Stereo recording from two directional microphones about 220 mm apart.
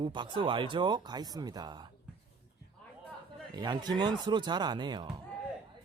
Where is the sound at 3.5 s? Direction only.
20° right (ahead or behind).